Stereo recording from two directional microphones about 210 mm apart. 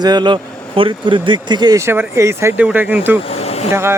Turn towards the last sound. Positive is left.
turn(degrees=-10)  # may be behind; listen again after turning